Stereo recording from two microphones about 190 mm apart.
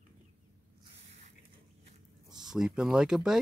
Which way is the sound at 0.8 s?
35° right (ahead or behind).